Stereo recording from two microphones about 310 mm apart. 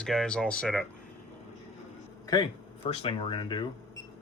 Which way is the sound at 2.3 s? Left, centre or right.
Centre.